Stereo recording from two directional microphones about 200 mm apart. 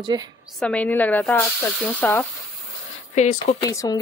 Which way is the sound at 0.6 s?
5° left (ahead or behind).